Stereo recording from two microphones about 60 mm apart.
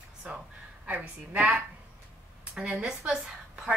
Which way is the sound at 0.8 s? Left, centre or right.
Right.